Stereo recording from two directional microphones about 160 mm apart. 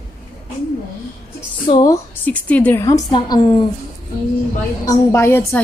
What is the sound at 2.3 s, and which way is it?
A woman's voice, 10° left (ahead or behind).